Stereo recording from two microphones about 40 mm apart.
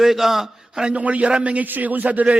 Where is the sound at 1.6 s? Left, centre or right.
Right.